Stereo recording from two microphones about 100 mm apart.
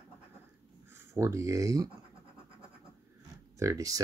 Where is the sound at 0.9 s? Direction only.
30° right (ahead or behind).